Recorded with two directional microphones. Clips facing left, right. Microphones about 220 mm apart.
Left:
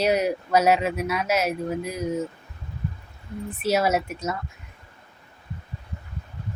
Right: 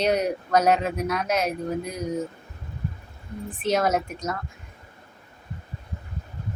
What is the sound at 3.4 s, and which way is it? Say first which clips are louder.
Speech: left 1 dB; 5° left (ahead or behind).